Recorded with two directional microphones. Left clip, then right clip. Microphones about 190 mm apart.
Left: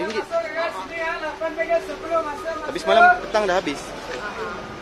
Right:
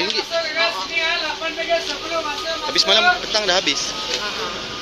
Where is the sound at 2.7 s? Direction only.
10° left (ahead or behind).